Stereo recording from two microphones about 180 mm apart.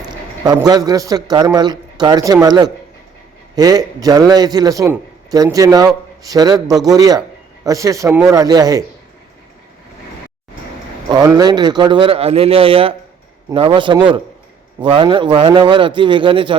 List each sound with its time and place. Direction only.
0.4 s a man's voice: 20° right (ahead or behind)
11.1 s a man's voice: 20° right (ahead or behind)